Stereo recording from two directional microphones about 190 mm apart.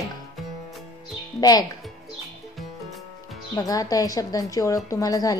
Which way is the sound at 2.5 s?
Centre (ahead or behind).